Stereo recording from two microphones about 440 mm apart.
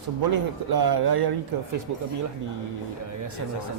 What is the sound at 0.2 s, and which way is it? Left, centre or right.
Speech, right.